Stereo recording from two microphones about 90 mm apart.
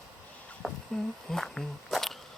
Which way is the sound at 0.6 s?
Centre (ahead or behind).